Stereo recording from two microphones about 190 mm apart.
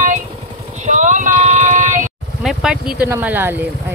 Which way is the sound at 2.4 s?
Centre (ahead or behind).